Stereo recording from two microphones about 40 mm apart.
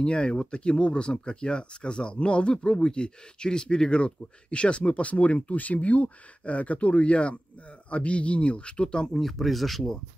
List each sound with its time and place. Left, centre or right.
0.0 s speech: left
9.1 s speech: centre